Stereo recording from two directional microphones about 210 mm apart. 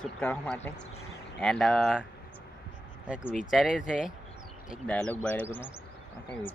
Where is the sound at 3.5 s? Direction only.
Centre (ahead or behind).